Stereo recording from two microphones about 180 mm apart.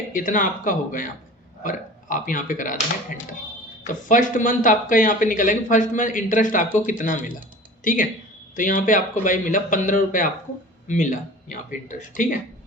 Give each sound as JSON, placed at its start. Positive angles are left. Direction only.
{"t": 0.1, "sound": "speech", "side_deg": 50}
{"t": 8.5, "sound": "speech", "side_deg": 45}